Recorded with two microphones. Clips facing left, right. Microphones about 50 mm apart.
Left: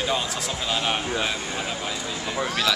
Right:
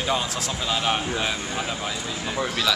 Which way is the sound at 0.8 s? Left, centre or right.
Centre.